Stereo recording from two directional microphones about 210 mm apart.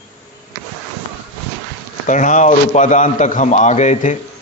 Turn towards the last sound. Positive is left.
turn(degrees=35)  # may be behind; listen again after turning